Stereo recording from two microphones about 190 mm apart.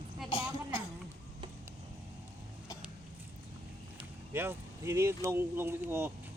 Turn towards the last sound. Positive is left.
turn(degrees=-10)  # may be behind; listen again after turning